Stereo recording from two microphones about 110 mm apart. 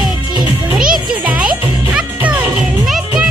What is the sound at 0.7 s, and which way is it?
Music, 5° right (ahead or behind).